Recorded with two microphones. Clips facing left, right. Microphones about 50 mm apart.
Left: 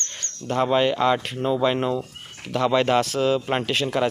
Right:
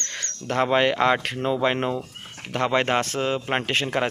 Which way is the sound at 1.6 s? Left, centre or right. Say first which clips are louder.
Left 1 dB; right.